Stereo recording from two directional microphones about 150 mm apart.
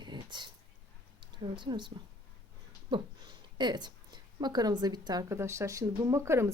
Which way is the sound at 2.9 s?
30° right (ahead or behind).